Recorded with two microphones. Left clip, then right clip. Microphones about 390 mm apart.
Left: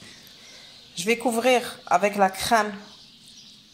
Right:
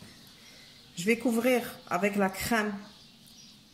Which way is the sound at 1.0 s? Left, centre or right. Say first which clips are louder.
Left 5 dB; left.